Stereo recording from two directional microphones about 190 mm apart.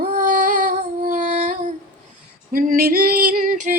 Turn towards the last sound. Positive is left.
turn(degrees=-40)  # may be behind; listen again after turning